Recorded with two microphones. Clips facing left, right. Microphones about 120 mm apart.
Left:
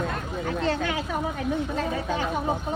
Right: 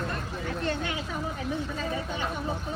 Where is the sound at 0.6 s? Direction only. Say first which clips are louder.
Left 5 dB; 90° left.